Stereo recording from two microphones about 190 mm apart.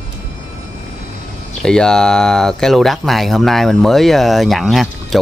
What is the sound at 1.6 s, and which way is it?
Speech, 5° left (ahead or behind).